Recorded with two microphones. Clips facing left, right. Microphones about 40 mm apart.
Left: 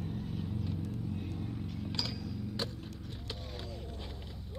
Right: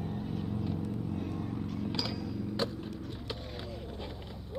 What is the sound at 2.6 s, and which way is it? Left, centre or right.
Vehicle, centre.